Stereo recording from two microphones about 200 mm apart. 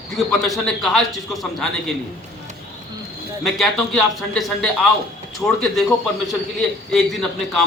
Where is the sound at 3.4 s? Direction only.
Centre (ahead or behind).